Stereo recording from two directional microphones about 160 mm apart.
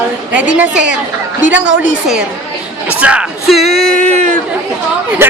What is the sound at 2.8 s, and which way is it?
Speech, 5° right (ahead or behind).